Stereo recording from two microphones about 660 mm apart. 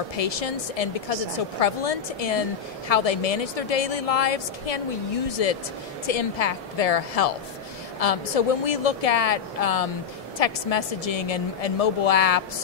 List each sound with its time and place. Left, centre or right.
0.2 s a woman's voice: left